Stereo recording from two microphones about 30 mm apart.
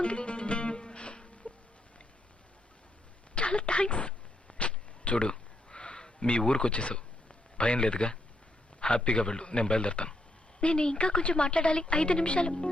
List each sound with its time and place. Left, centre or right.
0.0 s music: left
3.3 s a sound: left
6.4 s a woman's voice: left